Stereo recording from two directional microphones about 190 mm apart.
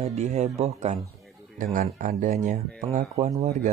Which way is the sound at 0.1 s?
35° right (ahead or behind).